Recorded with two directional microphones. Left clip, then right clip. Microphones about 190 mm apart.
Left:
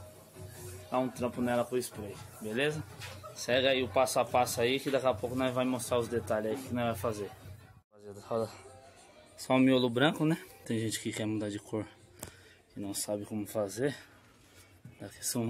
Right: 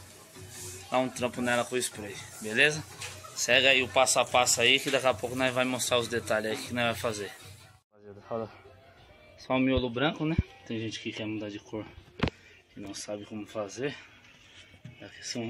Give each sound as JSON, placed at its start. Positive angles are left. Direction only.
{"t": 0.9, "sound": "speech", "side_deg": 0}
{"t": 13.0, "sound": "speech", "side_deg": 25}
{"t": 15.0, "sound": "speech", "side_deg": 40}